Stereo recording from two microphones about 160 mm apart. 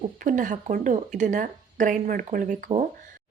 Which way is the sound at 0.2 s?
55° right (ahead or behind).